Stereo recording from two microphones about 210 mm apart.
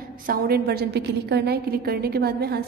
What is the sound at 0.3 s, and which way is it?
A woman's voice, 50° right (ahead or behind).